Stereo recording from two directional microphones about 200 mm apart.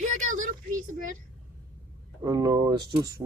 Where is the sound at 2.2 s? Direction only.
20° right (ahead or behind).